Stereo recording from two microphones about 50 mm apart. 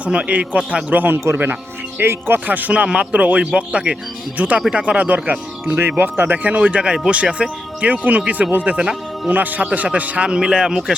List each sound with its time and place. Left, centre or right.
0.0 s speech: right
2.0 s speech: right
2.5 s speech: right
3.4 s speech: centre
4.4 s speech: right
5.6 s speech: right; by 9.3 s centre
9.3 s speech: right
10.2 s speech: centre